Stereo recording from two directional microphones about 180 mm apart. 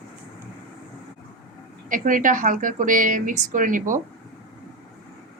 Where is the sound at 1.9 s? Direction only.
50° right (ahead or behind).